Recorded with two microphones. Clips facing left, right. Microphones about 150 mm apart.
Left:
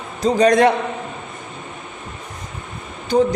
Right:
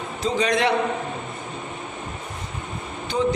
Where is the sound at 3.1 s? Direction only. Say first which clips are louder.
Left 7 dB; 35° left (ahead or behind).